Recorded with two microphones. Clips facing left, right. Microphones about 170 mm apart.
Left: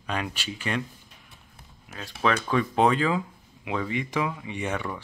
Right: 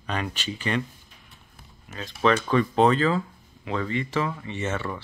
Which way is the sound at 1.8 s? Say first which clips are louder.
Right 3 dB; 5° left (ahead or behind).